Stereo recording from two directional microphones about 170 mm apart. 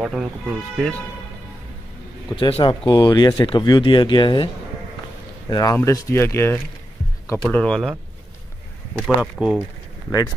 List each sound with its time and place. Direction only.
0.0 s speech: centre (ahead or behind)
2.3 s speech: 30° left (ahead or behind)
5.5 s speech: 25° left (ahead or behind); by 7.9 s 5° left (ahead or behind)
8.9 s speech: centre (ahead or behind)